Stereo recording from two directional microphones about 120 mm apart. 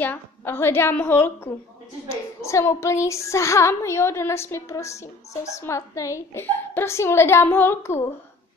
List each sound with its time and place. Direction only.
0.0 s a woman's voice: 15° left (ahead or behind)